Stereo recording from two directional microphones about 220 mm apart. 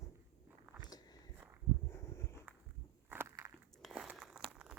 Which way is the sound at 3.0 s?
10° right (ahead or behind).